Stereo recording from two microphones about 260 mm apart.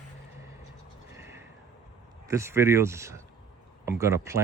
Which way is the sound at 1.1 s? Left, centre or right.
Centre.